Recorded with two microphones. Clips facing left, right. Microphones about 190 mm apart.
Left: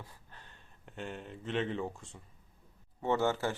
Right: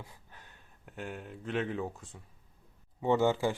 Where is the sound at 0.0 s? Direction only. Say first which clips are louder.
Right 1 dB; 15° right (ahead or behind).